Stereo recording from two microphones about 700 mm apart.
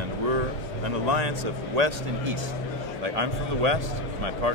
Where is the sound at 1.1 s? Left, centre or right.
Right.